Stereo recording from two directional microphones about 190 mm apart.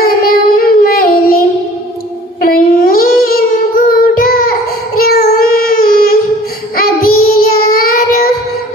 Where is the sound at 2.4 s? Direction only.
50° left (ahead or behind).